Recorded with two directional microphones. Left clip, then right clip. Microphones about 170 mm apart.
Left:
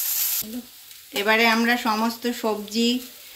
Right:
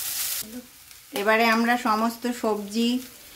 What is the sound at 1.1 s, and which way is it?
Speech, 15° right (ahead or behind).